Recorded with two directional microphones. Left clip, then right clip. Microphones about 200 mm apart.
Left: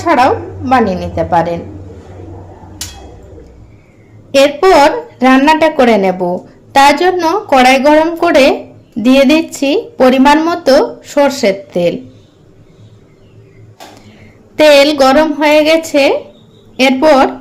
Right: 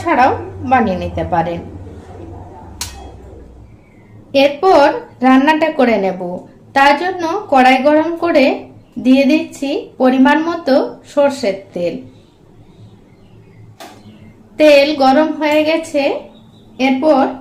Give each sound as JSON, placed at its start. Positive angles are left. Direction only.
{"t": 0.0, "sound": "a woman's voice", "side_deg": 25}
{"t": 4.3, "sound": "a woman's voice", "side_deg": 35}
{"t": 14.5, "sound": "a woman's voice", "side_deg": 40}